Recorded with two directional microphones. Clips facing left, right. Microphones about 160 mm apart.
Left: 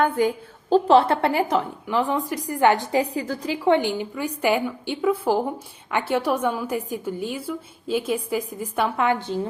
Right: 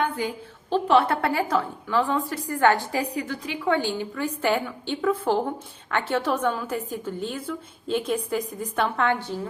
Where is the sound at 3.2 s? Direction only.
35° left (ahead or behind).